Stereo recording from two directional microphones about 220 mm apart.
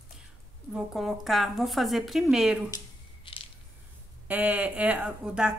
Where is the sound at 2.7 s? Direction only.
25° left (ahead or behind).